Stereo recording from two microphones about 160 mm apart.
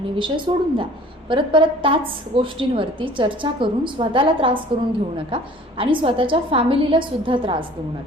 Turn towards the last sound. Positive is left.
turn(degrees=-30)  # may be behind; listen again after turning